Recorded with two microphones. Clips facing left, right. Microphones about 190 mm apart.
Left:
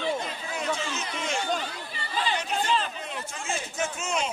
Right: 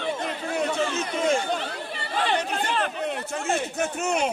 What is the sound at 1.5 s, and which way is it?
Speech, 65° right (ahead or behind).